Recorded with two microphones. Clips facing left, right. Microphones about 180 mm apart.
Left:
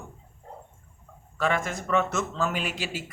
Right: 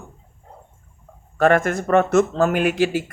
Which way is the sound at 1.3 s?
55° right (ahead or behind).